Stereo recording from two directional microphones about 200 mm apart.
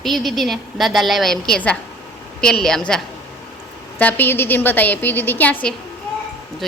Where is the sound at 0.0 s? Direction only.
Centre (ahead or behind).